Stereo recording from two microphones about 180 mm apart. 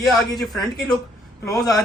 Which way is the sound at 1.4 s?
20° left (ahead or behind).